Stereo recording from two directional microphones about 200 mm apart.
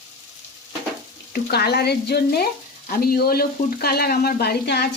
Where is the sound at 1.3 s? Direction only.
50° left (ahead or behind).